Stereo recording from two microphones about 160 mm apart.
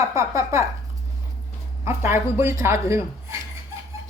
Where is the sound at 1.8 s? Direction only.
15° right (ahead or behind).